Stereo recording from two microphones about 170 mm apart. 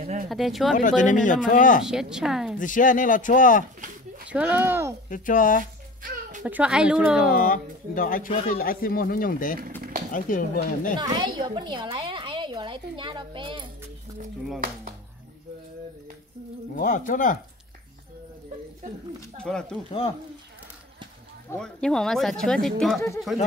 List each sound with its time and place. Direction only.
0.3 s speech: centre (ahead or behind)
0.7 s speech: 50° left (ahead or behind)
1.9 s speech: 5° right (ahead or behind)
2.6 s speech: 50° left (ahead or behind)
4.3 s speech: 10° right (ahead or behind)
5.1 s speech: 50° left (ahead or behind)
6.4 s speech: 10° right (ahead or behind)
7.4 s speech: 55° left (ahead or behind)
11.0 s a woman's voice: 25° right (ahead or behind)
16.7 s speech: 50° left (ahead or behind)
19.4 s speech: 5° left (ahead or behind)
21.5 s speech: 5° left (ahead or behind)
22.9 s speech: 20° left (ahead or behind)